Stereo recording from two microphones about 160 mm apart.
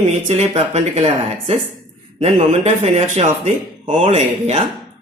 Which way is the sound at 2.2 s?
40° right (ahead or behind).